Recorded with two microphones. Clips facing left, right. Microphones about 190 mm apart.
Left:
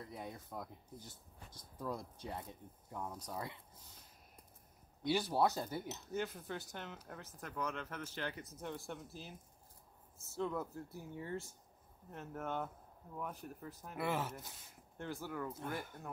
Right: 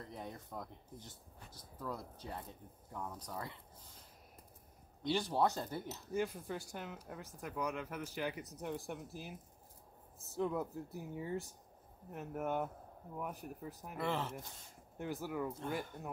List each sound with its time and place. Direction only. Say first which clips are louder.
0.1 s speech: right 1 dB; 5° left (ahead or behind)
1.8 s speech: left 1 dB; 15° left (ahead or behind)
5.3 s speech: even; 10° left (ahead or behind); by 13.9 s 15° right (ahead or behind)
13.9 s speech: even; 10° left (ahead or behind)
15.0 s speech: right 3 dB; 15° right (ahead or behind)